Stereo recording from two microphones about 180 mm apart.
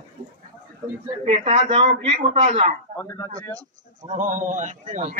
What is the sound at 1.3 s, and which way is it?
Speech, 35° right (ahead or behind).